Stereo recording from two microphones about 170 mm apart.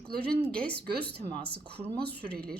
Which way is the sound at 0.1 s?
65° right (ahead or behind).